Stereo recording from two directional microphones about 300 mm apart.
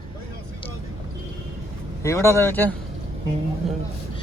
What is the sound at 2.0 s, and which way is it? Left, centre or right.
Speech, centre.